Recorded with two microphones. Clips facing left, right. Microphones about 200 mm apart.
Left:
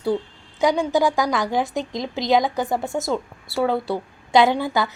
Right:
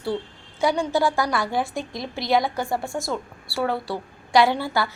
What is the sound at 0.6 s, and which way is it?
A woman's voice, 15° left (ahead or behind).